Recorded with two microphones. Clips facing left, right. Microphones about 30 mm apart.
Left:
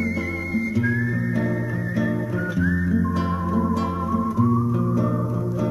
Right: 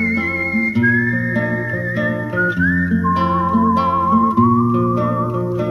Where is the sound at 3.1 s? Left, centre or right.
Right.